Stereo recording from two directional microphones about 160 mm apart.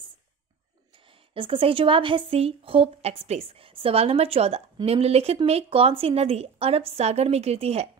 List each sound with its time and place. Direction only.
0.9 s a woman's voice: 35° right (ahead or behind)